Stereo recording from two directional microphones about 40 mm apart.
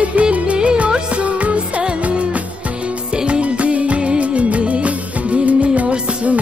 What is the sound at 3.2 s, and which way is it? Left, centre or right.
Music, right.